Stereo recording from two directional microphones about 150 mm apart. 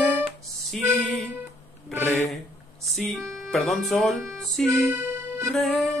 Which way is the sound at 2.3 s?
Centre (ahead or behind).